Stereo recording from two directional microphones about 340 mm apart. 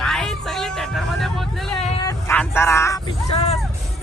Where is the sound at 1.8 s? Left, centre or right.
Centre.